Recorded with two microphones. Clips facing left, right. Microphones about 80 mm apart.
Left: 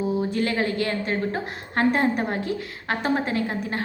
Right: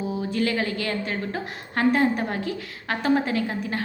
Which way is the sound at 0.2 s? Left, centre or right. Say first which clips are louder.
Left 1 dB; left.